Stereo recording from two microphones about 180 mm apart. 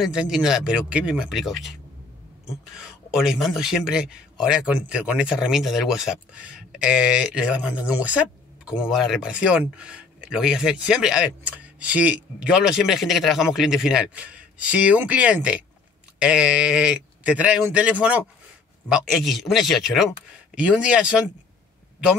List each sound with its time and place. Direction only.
0.0 s speech: 5° right (ahead or behind)